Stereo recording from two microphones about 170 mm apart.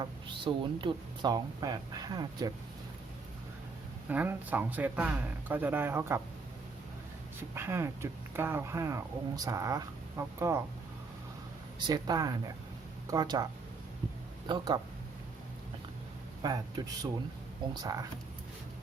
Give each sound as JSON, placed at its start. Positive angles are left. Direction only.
{"t": 0.0, "sound": "speech", "side_deg": -30}
{"t": 4.1, "sound": "speech", "side_deg": -10}
{"t": 7.3, "sound": "speech", "side_deg": -15}
{"t": 11.8, "sound": "speech", "side_deg": -25}
{"t": 14.4, "sound": "speech", "side_deg": -25}
{"t": 16.4, "sound": "speech", "side_deg": -25}